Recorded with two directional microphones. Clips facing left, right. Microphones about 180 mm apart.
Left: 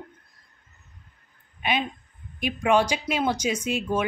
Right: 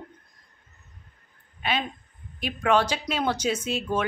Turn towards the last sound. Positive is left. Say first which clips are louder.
# left 1 dB
turn(degrees=10)  # may be behind; listen again after turning